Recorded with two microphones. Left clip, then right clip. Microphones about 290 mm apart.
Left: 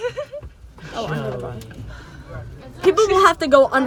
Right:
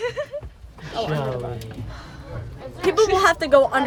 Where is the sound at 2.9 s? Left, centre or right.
Left.